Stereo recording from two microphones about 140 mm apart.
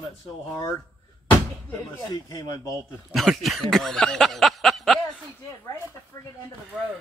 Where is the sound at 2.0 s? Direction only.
25° left (ahead or behind).